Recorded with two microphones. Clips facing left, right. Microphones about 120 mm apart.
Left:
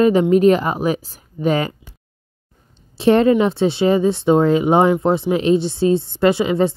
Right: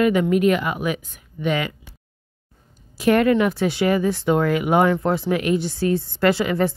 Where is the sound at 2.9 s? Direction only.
25° left (ahead or behind).